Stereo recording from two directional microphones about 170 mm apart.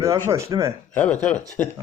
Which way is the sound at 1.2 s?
10° left (ahead or behind).